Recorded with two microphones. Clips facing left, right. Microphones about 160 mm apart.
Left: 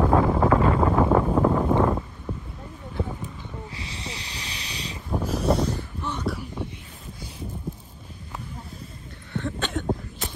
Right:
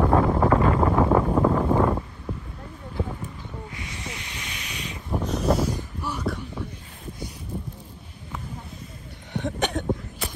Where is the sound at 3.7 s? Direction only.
30° left (ahead or behind).